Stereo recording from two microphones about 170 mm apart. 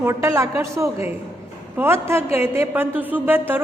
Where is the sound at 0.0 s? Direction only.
15° right (ahead or behind).